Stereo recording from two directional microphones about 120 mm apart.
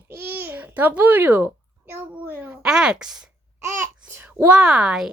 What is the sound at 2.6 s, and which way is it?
Speech, 5° right (ahead or behind).